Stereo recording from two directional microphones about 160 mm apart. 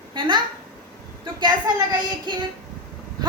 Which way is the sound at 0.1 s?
30° right (ahead or behind).